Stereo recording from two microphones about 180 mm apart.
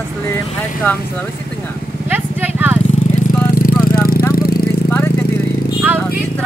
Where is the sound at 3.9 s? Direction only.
55° left (ahead or behind).